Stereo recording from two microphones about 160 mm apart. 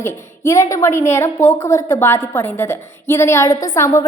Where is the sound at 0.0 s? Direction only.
20° left (ahead or behind).